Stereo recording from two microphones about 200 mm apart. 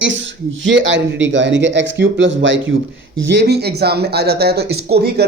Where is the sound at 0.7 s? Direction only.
65° right (ahead or behind).